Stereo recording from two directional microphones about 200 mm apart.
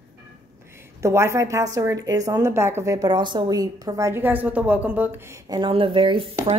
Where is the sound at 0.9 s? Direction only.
15° right (ahead or behind).